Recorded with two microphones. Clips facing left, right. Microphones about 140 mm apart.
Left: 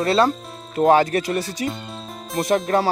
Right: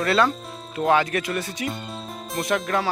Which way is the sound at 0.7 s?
40° left (ahead or behind).